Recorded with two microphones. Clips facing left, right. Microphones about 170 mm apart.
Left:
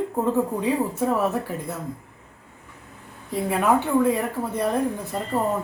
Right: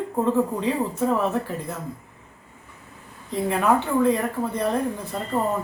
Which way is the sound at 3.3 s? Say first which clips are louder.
Even; 10° left (ahead or behind).